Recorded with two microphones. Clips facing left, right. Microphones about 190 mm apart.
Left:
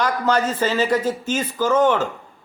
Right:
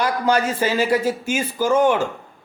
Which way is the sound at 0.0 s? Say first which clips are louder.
Even; 10° right (ahead or behind).